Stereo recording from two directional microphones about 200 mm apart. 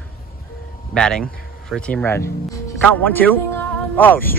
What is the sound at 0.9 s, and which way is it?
A man's voice, 5° left (ahead or behind).